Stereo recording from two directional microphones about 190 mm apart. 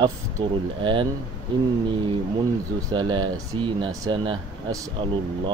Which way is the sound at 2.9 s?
25° right (ahead or behind).